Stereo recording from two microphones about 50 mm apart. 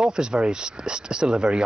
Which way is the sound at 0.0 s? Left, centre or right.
Centre.